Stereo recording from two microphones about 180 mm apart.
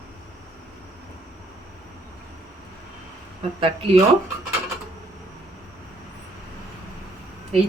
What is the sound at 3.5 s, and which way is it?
Speech, 30° right (ahead or behind).